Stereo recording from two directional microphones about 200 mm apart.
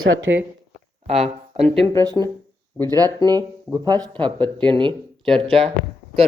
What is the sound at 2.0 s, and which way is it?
Speech, 20° right (ahead or behind).